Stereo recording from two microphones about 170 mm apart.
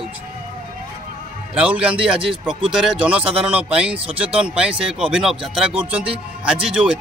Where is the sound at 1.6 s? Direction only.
5° right (ahead or behind).